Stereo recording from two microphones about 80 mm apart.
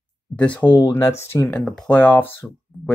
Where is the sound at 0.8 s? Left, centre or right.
Left.